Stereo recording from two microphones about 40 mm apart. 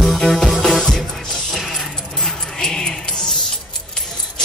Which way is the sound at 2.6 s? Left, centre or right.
Centre.